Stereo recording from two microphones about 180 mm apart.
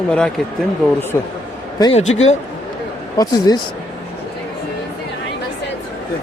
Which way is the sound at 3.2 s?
25° left (ahead or behind).